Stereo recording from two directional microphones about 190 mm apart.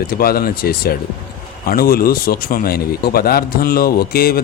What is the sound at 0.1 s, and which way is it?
A man's voice, 50° left (ahead or behind).